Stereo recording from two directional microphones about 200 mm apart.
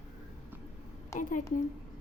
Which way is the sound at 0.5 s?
10° right (ahead or behind).